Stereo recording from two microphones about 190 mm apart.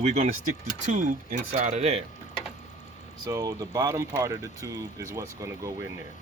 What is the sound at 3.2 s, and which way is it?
Speech, 15° right (ahead or behind).